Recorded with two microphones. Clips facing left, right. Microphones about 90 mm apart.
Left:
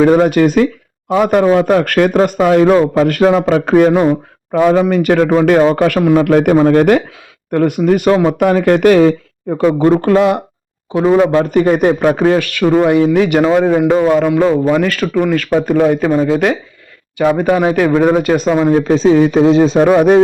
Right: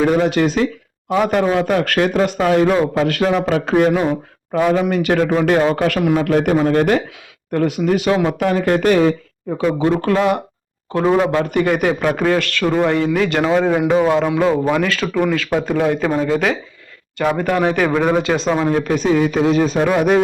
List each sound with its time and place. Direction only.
0.0 s a man's voice: 50° left (ahead or behind)
6.1 s a man's voice: 55° left (ahead or behind)
6.6 s a man's voice: 40° left (ahead or behind)
8.5 s speech: 75° left (ahead or behind)
9.6 s a man's voice: 55° left (ahead or behind)
10.0 s a man's voice: 35° left (ahead or behind)
11.0 s speech: 5° left (ahead or behind)
11.3 s a man's voice: 35° left (ahead or behind)
12.1 s speech: 20° left (ahead or behind)
12.4 s speech: 10° left (ahead or behind); by 20.2 s 30° left (ahead or behind)